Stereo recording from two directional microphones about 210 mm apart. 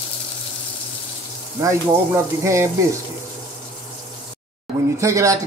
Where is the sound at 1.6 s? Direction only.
15° right (ahead or behind).